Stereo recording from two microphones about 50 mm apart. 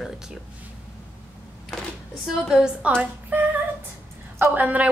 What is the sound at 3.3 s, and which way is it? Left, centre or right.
Speech, right.